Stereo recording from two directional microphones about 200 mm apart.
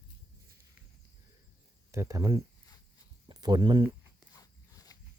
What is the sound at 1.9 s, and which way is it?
Speech, 15° right (ahead or behind).